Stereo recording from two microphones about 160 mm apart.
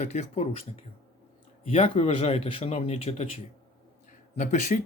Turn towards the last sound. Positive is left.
turn(degrees=50)  # may be behind; listen again after turning